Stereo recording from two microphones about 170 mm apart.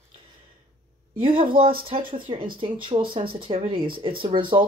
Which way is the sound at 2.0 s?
55° right (ahead or behind).